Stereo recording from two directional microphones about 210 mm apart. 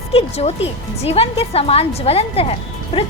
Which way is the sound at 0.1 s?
30° left (ahead or behind).